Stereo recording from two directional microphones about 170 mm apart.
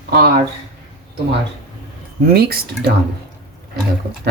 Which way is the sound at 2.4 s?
65° right (ahead or behind).